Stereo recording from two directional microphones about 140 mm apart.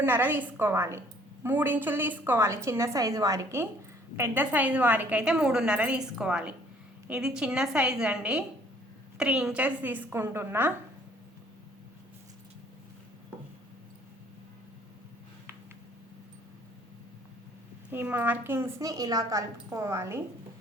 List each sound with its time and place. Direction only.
0.0 s a woman's voice: 15° right (ahead or behind)
17.9 s a woman's voice: 15° right (ahead or behind)